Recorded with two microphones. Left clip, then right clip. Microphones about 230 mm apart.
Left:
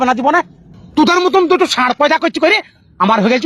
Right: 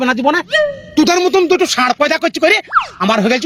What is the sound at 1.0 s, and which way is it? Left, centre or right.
Speech, right.